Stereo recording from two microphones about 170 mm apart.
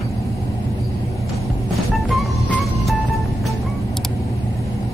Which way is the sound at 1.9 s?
Centre (ahead or behind).